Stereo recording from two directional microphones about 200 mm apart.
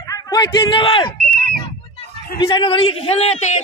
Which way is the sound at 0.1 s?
20° left (ahead or behind).